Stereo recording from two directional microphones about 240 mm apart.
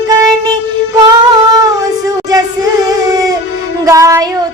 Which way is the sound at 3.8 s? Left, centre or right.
Centre.